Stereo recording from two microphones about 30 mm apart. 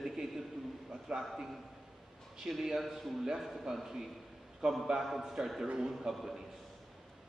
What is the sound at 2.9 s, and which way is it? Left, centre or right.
Speech, centre.